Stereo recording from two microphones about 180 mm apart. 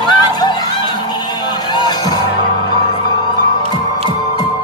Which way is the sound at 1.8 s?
20° left (ahead or behind).